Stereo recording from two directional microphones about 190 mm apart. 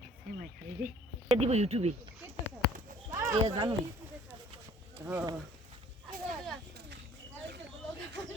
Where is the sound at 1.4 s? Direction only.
35° right (ahead or behind).